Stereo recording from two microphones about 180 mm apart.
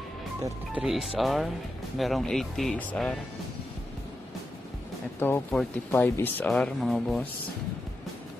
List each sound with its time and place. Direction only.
0.7 s speech: centre (ahead or behind)
5.2 s speech: 10° left (ahead or behind)